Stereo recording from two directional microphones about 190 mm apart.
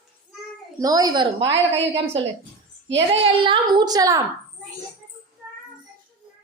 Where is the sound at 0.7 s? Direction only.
20° right (ahead or behind).